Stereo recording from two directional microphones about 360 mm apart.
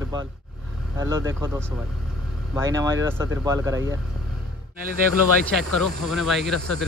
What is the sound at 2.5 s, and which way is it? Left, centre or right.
Speech, centre.